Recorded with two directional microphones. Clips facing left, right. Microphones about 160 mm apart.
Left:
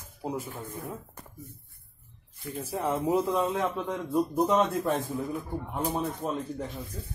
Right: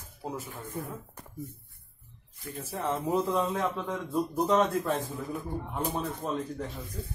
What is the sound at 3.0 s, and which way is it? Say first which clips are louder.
A man's voice: left 1 dB; centre (ahead or behind).